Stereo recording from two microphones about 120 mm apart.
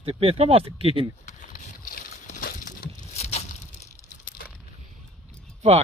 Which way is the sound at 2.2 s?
90° left.